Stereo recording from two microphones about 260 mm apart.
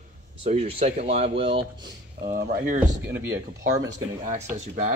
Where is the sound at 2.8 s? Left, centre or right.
Centre.